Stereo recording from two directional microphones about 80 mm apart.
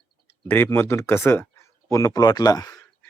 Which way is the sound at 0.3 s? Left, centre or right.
Left.